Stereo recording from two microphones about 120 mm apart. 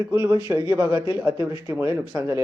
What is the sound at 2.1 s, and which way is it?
Speech, 25° right (ahead or behind).